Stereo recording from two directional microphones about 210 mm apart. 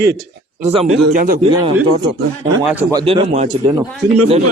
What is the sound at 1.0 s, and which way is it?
Speech, 40° right (ahead or behind).